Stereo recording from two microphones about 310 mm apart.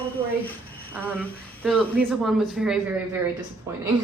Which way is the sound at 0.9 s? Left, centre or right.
Centre.